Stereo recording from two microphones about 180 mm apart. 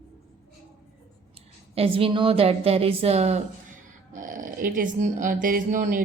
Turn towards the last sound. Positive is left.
turn(degrees=-45)  # may be behind; listen again after turning